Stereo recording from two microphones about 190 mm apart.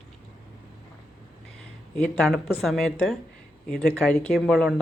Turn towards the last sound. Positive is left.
turn(degrees=0)  # may be behind; listen again after turning